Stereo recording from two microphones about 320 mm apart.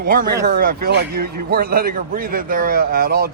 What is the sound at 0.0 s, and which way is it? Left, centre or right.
A man's voice, right.